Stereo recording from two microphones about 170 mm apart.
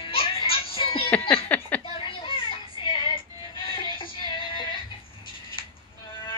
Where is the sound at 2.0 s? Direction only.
30° left (ahead or behind).